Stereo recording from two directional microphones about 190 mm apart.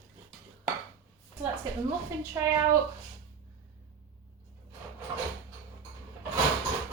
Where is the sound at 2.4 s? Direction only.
15° right (ahead or behind).